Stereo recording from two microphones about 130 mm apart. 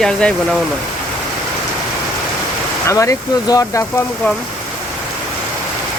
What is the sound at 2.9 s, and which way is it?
Speech, 25° left (ahead or behind).